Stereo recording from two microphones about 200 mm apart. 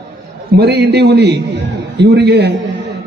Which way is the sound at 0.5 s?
55° right (ahead or behind).